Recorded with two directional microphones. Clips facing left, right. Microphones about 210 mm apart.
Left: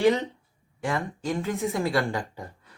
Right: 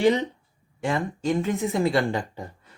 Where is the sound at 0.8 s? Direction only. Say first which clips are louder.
Right 3 dB; 20° right (ahead or behind).